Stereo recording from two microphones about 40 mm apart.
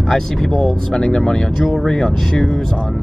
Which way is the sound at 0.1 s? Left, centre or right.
Centre.